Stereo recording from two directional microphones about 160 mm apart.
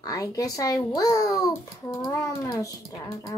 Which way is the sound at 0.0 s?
25° left (ahead or behind).